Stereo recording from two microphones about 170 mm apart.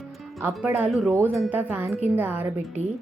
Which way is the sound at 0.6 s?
10° right (ahead or behind).